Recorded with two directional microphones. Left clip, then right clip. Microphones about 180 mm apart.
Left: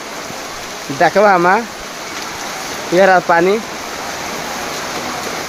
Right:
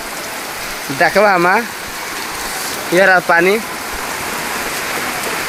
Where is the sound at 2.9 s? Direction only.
5° left (ahead or behind).